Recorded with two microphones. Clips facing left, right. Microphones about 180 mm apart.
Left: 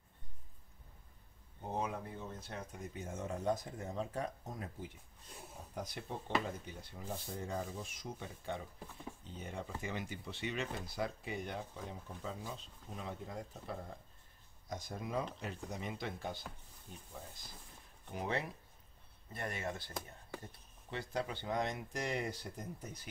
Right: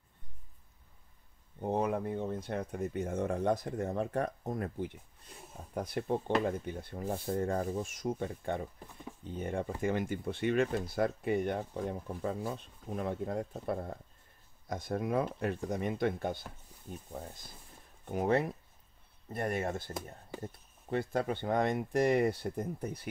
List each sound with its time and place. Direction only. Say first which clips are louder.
1.6 s speech: right 8 dB; 60° right (ahead or behind)